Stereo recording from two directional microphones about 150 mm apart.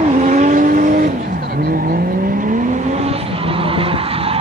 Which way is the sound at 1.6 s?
80° right.